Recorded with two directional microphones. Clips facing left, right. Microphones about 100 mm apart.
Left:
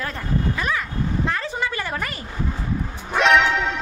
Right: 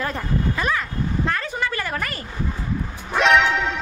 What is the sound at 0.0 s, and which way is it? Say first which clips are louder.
Speech: right 1 dB; 5° right (ahead or behind).